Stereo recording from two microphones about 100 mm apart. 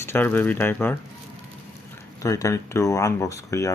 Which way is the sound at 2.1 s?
35° left (ahead or behind).